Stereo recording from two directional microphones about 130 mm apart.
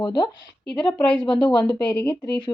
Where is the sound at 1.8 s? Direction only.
10° left (ahead or behind).